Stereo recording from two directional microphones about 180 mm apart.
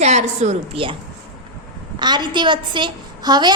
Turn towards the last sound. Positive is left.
turn(degrees=-25)  # may be behind; listen again after turning